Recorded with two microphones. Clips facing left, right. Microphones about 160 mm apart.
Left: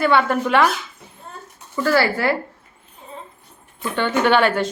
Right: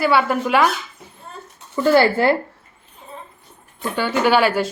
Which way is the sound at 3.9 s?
5° right (ahead or behind).